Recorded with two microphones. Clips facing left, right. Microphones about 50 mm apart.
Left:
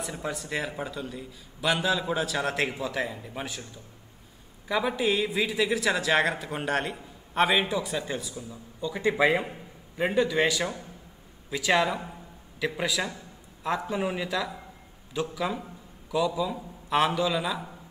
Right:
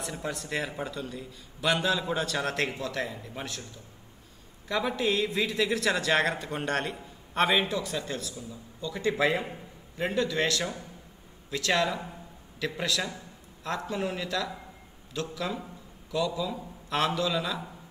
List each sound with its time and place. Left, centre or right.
0.0 s a man's voice: centre
4.6 s a man's voice: centre